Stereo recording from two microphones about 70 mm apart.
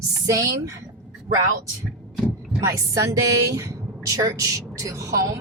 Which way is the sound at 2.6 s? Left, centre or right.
Right.